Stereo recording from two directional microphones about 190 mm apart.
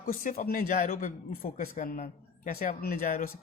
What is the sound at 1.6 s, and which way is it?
Speech, 50° left (ahead or behind).